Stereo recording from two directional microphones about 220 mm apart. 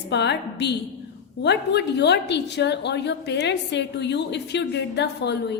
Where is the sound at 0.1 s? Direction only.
50° left (ahead or behind).